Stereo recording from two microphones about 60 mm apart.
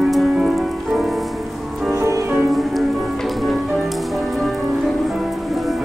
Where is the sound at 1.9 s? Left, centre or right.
Right.